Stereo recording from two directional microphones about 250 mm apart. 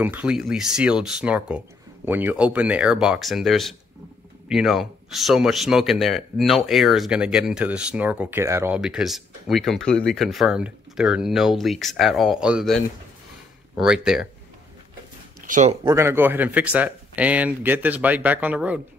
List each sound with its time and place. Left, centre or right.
0.0 s speech: centre
15.4 s speech: right
15.8 s speech: centre